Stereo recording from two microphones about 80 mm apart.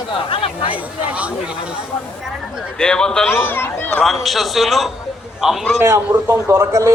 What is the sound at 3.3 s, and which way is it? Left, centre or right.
Speech, left.